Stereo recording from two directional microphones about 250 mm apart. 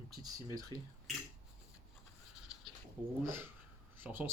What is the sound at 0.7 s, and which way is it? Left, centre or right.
Speech, centre.